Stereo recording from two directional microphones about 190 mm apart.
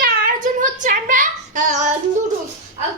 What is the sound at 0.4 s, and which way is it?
Child singing, 40° right (ahead or behind).